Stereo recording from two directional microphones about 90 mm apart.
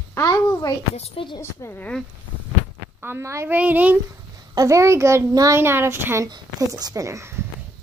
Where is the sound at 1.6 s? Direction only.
30° left (ahead or behind).